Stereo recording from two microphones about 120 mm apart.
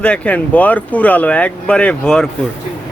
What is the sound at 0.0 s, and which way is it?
Speech, 10° left (ahead or behind).